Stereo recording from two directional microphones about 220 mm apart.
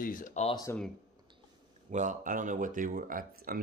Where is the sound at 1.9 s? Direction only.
35° right (ahead or behind).